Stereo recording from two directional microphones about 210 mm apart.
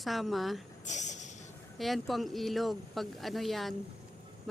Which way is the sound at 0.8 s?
35° left (ahead or behind).